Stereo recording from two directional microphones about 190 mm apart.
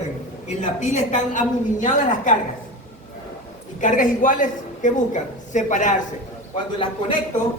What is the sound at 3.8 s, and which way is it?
A woman's voice, 45° left (ahead or behind).